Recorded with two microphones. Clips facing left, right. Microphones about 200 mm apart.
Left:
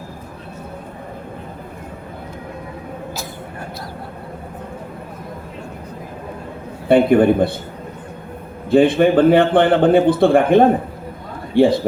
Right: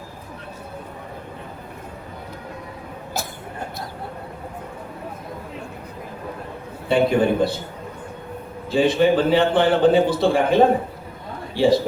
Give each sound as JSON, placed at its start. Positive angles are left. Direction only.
{"t": 6.8, "sound": "a man's voice", "side_deg": 55}
{"t": 8.7, "sound": "a man's voice", "side_deg": 55}